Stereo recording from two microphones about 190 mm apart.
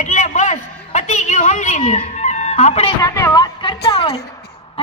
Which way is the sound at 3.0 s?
15° left (ahead or behind).